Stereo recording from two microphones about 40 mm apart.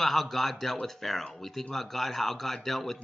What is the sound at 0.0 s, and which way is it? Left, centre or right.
A man's voice, centre.